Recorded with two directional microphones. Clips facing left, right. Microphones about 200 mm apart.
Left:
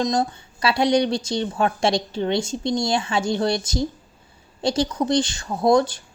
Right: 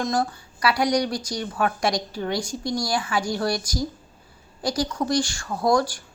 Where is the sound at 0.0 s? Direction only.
20° left (ahead or behind).